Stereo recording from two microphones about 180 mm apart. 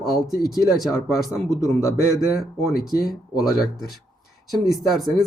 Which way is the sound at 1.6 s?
15° left (ahead or behind).